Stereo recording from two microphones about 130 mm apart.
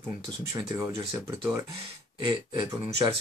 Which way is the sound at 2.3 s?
35° right (ahead or behind).